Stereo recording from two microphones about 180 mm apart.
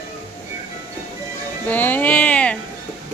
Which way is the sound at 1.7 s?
10° left (ahead or behind).